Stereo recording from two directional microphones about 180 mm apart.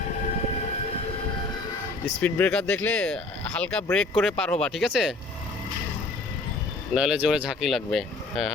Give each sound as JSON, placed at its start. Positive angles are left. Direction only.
{"t": 2.2, "sound": "speech", "side_deg": 5}
{"t": 6.9, "sound": "speech", "side_deg": -5}